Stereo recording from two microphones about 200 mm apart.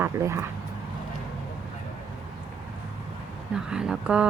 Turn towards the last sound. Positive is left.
turn(degrees=-5)  # may be behind; listen again after turning